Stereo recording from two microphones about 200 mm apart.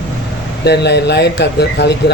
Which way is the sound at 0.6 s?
55° left (ahead or behind).